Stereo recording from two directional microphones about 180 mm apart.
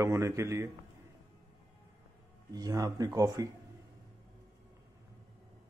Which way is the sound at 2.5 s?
20° right (ahead or behind).